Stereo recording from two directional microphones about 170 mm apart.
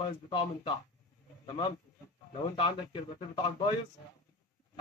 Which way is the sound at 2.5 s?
30° left (ahead or behind).